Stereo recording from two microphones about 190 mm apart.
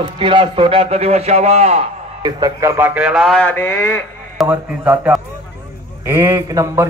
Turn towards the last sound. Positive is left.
turn(degrees=-15)  # may be behind; listen again after turning